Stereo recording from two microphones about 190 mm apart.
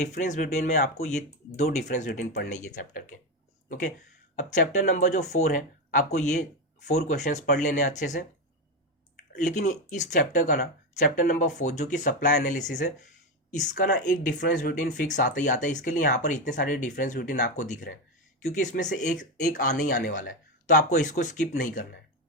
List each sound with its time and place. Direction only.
0.0 s speech: 40° left (ahead or behind)
9.6 s speech: 40° left (ahead or behind)